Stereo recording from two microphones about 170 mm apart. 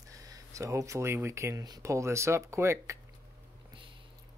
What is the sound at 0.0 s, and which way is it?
Speech, 20° right (ahead or behind).